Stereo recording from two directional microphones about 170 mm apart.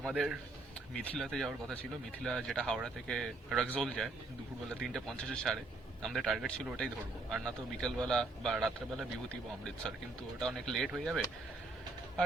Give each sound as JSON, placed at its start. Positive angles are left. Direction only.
{"t": 0.0, "sound": "a man's voice", "side_deg": -5}
{"t": 10.4, "sound": "a man's voice", "side_deg": 0}